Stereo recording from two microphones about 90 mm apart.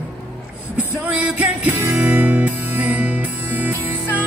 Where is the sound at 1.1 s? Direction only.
15° right (ahead or behind).